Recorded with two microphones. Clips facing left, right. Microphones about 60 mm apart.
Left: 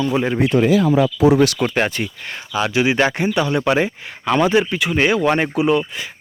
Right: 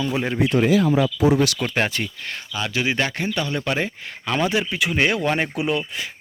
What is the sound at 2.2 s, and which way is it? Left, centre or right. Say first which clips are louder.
Speech: left 6 dB; centre.